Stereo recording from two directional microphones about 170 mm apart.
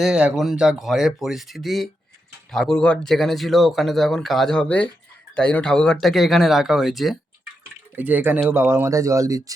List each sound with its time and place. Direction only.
0.0 s speech: 5° right (ahead or behind)